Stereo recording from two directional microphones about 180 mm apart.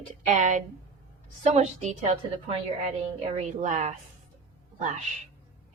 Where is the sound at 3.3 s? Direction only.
40° right (ahead or behind).